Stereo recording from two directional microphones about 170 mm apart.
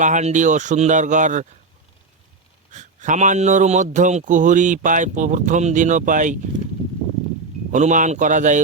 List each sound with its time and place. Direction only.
0.0 s speech: 45° right (ahead or behind)
2.7 s speech: 45° right (ahead or behind)
7.7 s speech: 45° right (ahead or behind)